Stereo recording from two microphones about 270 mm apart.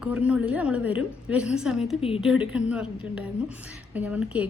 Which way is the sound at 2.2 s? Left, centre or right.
Centre.